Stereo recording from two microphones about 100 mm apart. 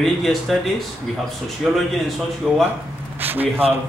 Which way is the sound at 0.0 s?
Centre (ahead or behind).